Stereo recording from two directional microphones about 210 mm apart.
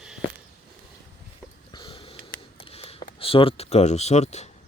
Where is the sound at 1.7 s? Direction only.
25° left (ahead or behind).